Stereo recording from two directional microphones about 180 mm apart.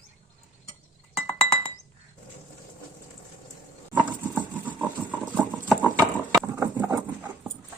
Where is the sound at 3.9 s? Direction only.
10° right (ahead or behind).